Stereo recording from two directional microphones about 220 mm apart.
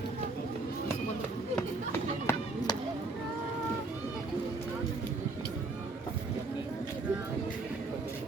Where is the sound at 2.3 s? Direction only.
10° left (ahead or behind).